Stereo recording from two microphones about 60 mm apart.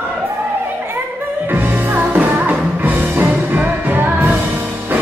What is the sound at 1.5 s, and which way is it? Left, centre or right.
Music, right.